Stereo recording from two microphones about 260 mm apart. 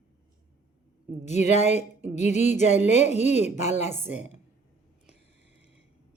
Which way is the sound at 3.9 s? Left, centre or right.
Centre.